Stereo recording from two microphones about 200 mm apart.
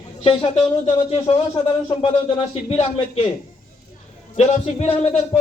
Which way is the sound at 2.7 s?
35° left (ahead or behind).